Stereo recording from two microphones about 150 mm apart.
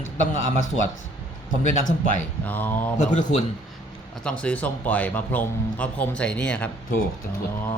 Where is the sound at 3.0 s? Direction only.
55° left (ahead or behind).